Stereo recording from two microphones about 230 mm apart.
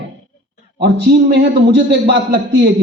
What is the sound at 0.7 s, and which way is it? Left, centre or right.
Speech, right.